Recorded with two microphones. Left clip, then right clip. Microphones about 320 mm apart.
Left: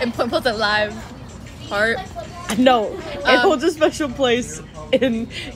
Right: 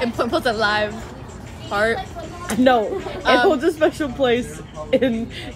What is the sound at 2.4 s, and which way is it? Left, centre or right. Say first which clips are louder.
Speech: left 1 dB; centre.